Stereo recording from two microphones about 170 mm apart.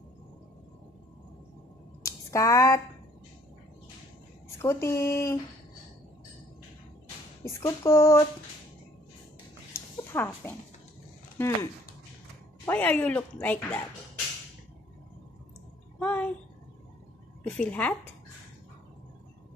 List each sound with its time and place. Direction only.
2.0 s a sound: 20° left (ahead or behind)
4.6 s speech: 15° left (ahead or behind)
7.4 s speech: 15° left (ahead or behind)
9.7 s a sound: 15° left (ahead or behind)
10.1 s speech: 15° left (ahead or behind)
11.3 s speech: 15° left (ahead or behind)
16.0 s speech: 10° left (ahead or behind)
17.4 s a woman's voice: 10° left (ahead or behind)